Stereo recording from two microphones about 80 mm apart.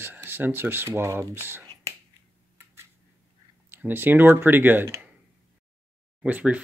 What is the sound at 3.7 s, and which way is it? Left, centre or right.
Speech, right.